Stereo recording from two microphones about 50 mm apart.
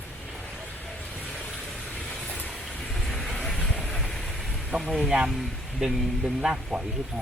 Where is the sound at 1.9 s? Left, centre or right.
Centre.